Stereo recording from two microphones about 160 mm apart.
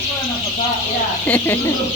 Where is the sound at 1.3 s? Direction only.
10° left (ahead or behind).